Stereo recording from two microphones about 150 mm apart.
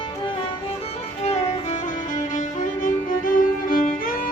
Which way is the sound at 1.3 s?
55° left (ahead or behind).